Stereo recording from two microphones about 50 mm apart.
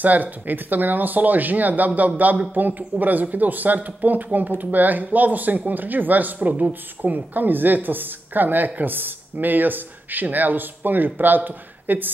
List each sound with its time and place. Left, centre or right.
0.0 s speech: right